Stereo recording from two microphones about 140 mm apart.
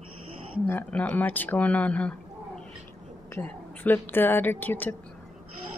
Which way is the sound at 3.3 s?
15° left (ahead or behind).